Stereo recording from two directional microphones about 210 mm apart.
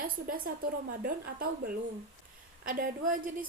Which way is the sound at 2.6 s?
40° right (ahead or behind).